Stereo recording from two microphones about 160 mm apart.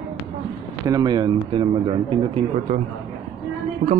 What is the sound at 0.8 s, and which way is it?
Speech, 25° right (ahead or behind).